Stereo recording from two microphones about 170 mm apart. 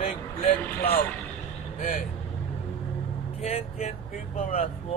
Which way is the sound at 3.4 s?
35° left (ahead or behind).